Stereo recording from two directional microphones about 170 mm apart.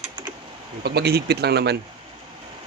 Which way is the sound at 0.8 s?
75° right (ahead or behind).